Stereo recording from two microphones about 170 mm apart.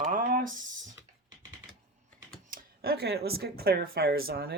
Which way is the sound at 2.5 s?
65° right (ahead or behind).